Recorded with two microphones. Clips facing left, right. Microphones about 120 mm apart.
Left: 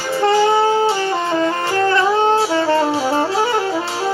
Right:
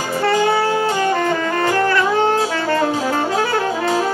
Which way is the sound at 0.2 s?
25° left (ahead or behind).